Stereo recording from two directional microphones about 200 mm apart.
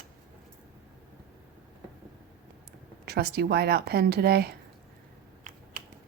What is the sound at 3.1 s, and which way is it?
Speech, 50° right (ahead or behind).